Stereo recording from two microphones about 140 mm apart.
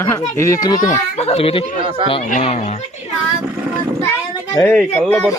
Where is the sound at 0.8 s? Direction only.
55° left (ahead or behind).